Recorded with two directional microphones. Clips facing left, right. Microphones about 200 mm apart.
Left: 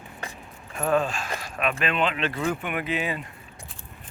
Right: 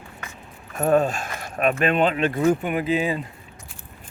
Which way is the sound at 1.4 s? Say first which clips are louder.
Right 7 dB; 50° right (ahead or behind).